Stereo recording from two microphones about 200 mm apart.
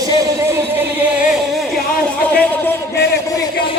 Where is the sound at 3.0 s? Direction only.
55° left (ahead or behind).